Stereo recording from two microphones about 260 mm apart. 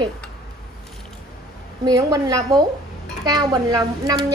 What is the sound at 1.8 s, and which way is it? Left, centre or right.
A woman's voice, centre.